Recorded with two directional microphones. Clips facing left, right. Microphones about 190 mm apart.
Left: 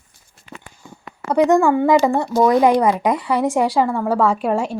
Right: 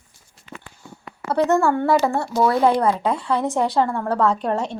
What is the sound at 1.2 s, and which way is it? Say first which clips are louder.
Speech: left 4 dB; 15° left (ahead or behind).